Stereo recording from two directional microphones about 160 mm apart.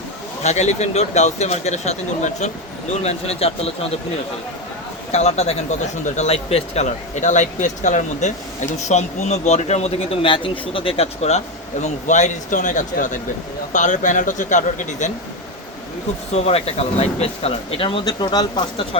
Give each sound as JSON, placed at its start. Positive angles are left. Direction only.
{"t": 0.4, "sound": "speech", "side_deg": 45}
{"t": 5.1, "sound": "speech", "side_deg": 45}
{"t": 16.3, "sound": "speech", "side_deg": 40}